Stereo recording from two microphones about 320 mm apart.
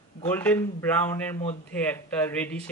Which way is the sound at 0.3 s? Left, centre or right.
Centre.